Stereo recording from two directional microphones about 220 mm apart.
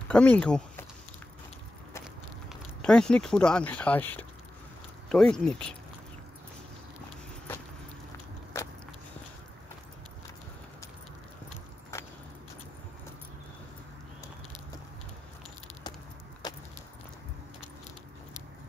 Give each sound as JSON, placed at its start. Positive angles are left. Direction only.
{"t": 0.1, "sound": "speech", "side_deg": 5}
{"t": 2.5, "sound": "speech", "side_deg": 5}
{"t": 8.5, "sound": "vehicle", "side_deg": 10}
{"t": 16.4, "sound": "vehicle", "side_deg": 20}